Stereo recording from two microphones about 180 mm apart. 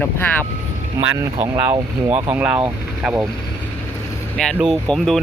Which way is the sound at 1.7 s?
30° right (ahead or behind).